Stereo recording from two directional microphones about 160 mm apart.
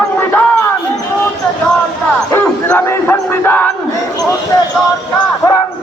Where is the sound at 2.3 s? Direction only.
15° left (ahead or behind).